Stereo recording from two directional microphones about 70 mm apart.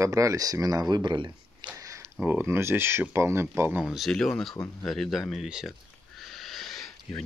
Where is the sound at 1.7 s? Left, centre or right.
Right.